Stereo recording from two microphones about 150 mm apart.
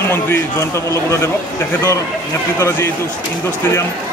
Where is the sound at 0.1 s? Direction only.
15° left (ahead or behind).